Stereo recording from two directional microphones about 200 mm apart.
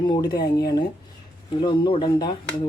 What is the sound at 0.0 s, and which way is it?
Speech, 20° left (ahead or behind).